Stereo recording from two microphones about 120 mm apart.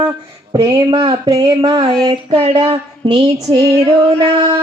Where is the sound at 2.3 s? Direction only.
50° right (ahead or behind).